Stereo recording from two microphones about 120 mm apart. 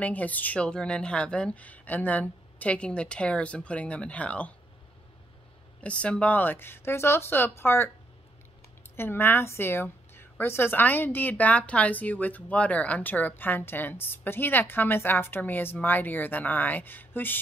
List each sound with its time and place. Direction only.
0.0 s a woman's voice: 15° left (ahead or behind)
5.8 s speech: 10° left (ahead or behind)
8.9 s a woman's voice: 20° left (ahead or behind)